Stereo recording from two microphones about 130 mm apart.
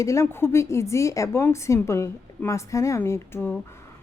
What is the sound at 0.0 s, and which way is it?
Speech, 25° left (ahead or behind).